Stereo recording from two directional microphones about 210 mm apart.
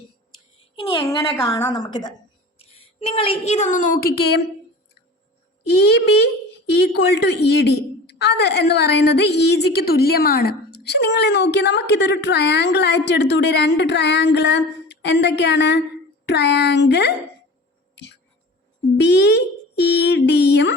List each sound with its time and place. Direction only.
0.9 s a woman's voice: 15° left (ahead or behind); by 4.4 s 50° left (ahead or behind)
5.6 s a woman's voice: 50° left (ahead or behind)
17.9 s a sound: 55° left (ahead or behind)
18.9 s a woman's voice: 55° left (ahead or behind)